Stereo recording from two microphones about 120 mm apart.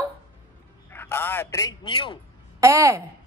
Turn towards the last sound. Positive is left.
turn(degrees=-25)  # may be behind; listen again after turning